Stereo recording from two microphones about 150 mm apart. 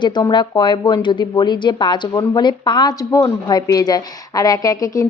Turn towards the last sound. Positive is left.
turn(degrees=25)  # may be behind; listen again after turning